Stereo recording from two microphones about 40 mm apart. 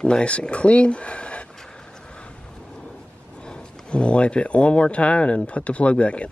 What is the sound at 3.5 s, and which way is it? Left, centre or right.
Speech, left.